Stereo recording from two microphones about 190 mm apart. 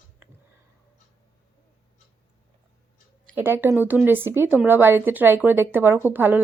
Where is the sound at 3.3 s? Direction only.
10° right (ahead or behind).